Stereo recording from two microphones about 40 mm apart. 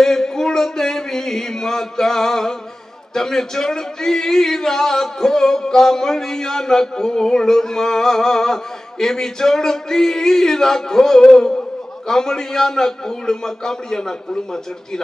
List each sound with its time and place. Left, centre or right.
0.0 s speech: centre